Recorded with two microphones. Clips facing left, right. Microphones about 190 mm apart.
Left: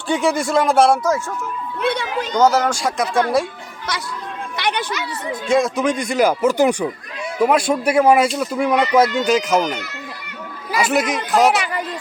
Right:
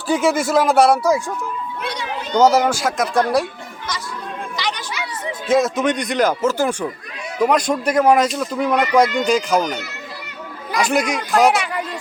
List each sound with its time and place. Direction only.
0.1 s speech: centre (ahead or behind)
1.8 s speech: 60° left (ahead or behind)
2.4 s speech: 10° right (ahead or behind)
4.5 s a sound: 60° left (ahead or behind)
5.5 s speech: 5° right (ahead or behind)
10.7 s speech: 5° left (ahead or behind)